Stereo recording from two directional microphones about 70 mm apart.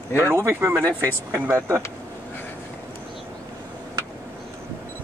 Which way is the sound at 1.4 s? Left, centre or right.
Right.